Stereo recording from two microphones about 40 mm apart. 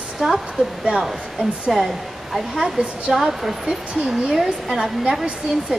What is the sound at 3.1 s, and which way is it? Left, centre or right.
Speech, centre.